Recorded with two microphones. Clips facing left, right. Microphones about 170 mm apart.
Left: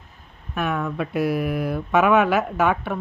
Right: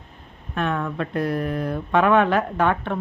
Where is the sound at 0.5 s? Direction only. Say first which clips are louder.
Even; 5° left (ahead or behind).